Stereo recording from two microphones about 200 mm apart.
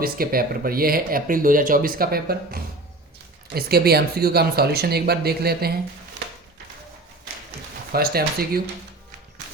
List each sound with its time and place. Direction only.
0.0 s speech: 45° right (ahead or behind)
7.9 s speech: 50° right (ahead or behind)